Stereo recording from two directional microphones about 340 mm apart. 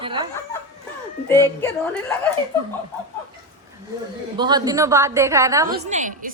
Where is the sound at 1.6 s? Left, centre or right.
Centre.